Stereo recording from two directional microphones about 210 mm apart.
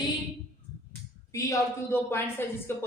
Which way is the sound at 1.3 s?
15° left (ahead or behind).